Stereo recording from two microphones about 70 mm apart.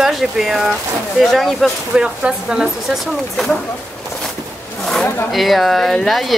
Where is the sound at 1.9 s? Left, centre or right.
Centre.